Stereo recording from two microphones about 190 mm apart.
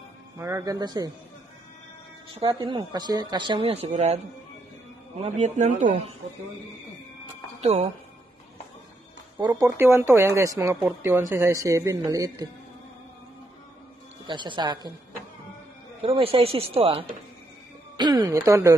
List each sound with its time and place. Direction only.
0.4 s a woman's voice: 15° right (ahead or behind)
2.4 s a woman's voice: 25° right (ahead or behind); by 6.0 s 40° right (ahead or behind)
7.6 s speech: 35° right (ahead or behind)
9.4 s speech: 15° right (ahead or behind)
14.2 s a woman's voice: 25° right (ahead or behind)
16.0 s speech: 30° right (ahead or behind); by 18.8 s 15° right (ahead or behind)